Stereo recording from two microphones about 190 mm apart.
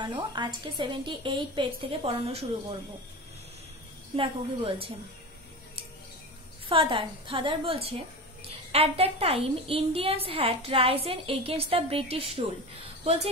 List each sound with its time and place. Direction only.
0.0 s a woman's voice: 25° right (ahead or behind)
4.2 s a woman's voice: 30° right (ahead or behind)
6.7 s a woman's voice: 30° right (ahead or behind)